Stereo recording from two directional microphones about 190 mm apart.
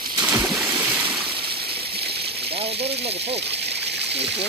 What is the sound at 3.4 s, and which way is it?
Splash, 60° right (ahead or behind).